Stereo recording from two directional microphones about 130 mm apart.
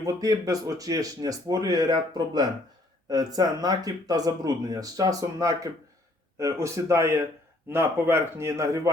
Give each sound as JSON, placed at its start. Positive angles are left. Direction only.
{"t": 0.0, "sound": "speech", "side_deg": -30}